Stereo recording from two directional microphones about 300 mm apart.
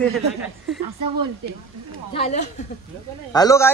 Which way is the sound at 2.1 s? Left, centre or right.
Left.